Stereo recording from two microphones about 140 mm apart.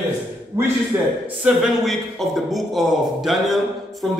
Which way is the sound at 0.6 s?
20° right (ahead or behind).